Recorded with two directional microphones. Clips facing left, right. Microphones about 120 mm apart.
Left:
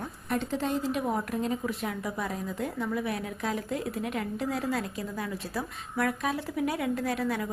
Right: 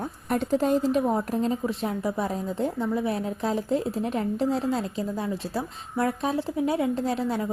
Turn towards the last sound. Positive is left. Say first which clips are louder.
# right 3 dB
turn(degrees=-25)  # may be behind; listen again after turning